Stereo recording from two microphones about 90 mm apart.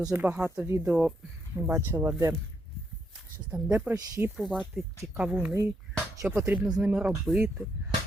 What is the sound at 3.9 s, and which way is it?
Speech, 45° right (ahead or behind).